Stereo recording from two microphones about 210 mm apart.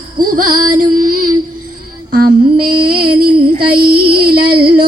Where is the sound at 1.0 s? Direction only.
40° right (ahead or behind).